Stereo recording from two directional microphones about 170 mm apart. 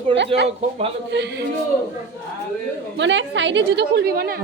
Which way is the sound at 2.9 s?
90° right.